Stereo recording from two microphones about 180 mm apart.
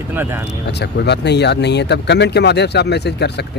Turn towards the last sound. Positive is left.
turn(degrees=70)  # may be behind; listen again after turning